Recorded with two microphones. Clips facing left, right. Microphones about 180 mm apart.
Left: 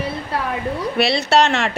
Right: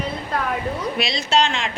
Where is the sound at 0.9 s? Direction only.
60° left (ahead or behind).